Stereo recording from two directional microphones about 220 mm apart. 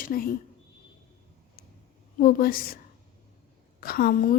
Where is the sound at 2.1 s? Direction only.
40° left (ahead or behind).